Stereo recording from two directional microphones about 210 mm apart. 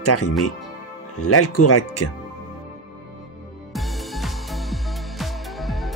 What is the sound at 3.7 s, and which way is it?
Music, centre (ahead or behind).